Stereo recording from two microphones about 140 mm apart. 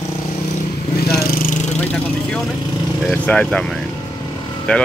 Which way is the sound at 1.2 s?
90° left.